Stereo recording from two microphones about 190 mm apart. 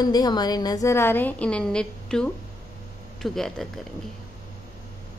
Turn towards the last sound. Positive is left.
turn(degrees=0)  # may be behind; listen again after turning